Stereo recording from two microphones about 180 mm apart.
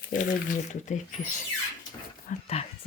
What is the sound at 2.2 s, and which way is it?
Speech, 35° left (ahead or behind).